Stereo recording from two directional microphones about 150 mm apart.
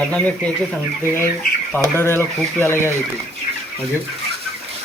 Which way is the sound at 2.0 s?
15° left (ahead or behind).